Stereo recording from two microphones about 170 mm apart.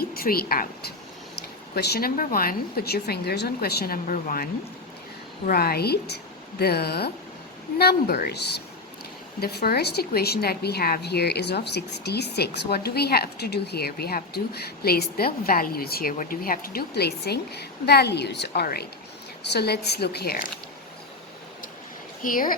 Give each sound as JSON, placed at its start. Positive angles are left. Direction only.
{"t": 0.0, "sound": "a woman's voice", "side_deg": 60}
{"t": 5.5, "sound": "a woman's voice", "side_deg": 60}
{"t": 22.2, "sound": "a woman's voice", "side_deg": 55}